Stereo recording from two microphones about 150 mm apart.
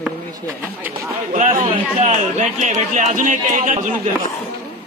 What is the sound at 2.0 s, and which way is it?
A man's voice, 55° right (ahead or behind).